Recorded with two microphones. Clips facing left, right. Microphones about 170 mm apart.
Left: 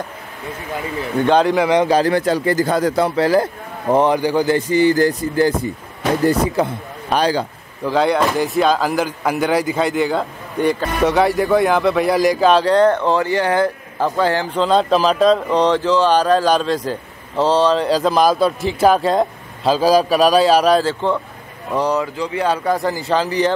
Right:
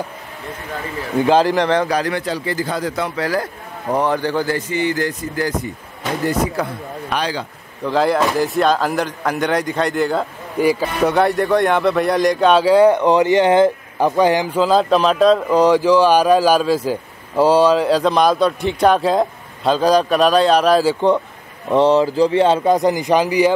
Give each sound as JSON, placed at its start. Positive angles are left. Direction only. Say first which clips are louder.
{"t": 1.2, "sound": "speech", "louder": "even", "side_deg": 0}
{"t": 1.9, "sound": "speech", "louder": "left 5 dB", "side_deg": 30}
{"t": 2.2, "sound": "speech", "louder": "left 5 dB", "side_deg": 50}
{"t": 3.2, "sound": "a man's voice", "louder": "left 6 dB", "side_deg": 30}
{"t": 4.6, "sound": "speech", "louder": "left 6 dB", "side_deg": 35}
{"t": 7.2, "sound": "speech", "louder": "left 6 dB", "side_deg": 40}
{"t": 7.8, "sound": "speech", "louder": "even", "side_deg": 0}
{"t": 20.8, "sound": "speech", "louder": "right 4 dB", "side_deg": -15}